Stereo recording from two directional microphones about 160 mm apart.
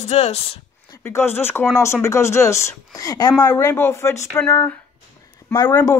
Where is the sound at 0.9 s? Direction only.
15° left (ahead or behind).